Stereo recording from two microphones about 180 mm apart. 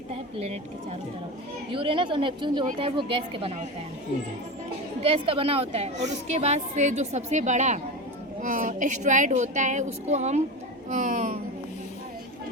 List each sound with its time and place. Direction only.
0.1 s a woman's voice: 35° right (ahead or behind)
5.0 s a woman's voice: 30° right (ahead or behind); by 11.3 s 45° right (ahead or behind)